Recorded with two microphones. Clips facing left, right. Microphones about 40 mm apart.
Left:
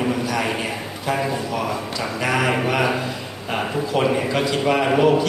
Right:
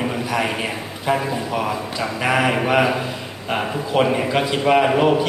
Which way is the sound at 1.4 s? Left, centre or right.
Centre.